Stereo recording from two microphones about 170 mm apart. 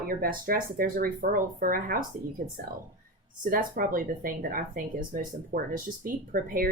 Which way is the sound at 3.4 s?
55° right (ahead or behind).